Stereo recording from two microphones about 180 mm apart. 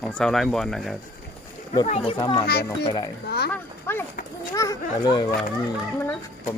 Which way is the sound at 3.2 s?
65° left (ahead or behind).